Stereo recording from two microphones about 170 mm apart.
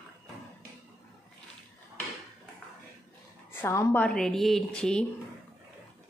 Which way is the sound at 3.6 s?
15° left (ahead or behind).